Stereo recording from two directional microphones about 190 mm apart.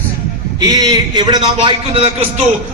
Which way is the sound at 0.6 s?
20° right (ahead or behind).